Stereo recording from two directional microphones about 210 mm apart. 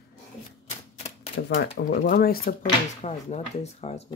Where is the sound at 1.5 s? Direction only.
60° left (ahead or behind).